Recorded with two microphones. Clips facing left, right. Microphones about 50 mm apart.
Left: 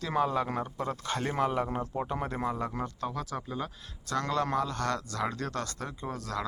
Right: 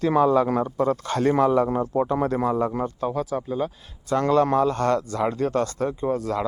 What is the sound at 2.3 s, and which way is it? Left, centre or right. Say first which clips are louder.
Speech: right 8 dB; right.